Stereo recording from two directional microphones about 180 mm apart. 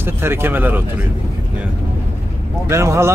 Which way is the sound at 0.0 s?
10° right (ahead or behind).